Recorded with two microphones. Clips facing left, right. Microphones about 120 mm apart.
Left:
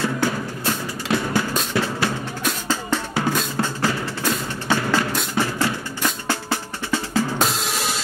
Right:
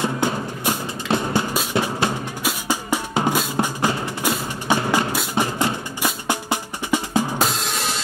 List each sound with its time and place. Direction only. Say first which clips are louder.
0.0 s music: even; 20° right (ahead or behind)
1.7 s drum: right 1 dB; 15° right (ahead or behind)
5.3 s music: right 1 dB; 20° right (ahead or behind)
7.3 s drum kit: even; centre (ahead or behind)